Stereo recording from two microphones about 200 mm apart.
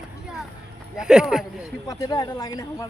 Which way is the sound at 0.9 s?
5° right (ahead or behind).